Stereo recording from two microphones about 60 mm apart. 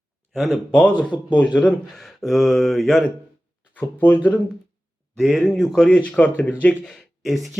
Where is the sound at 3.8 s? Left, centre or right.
Left.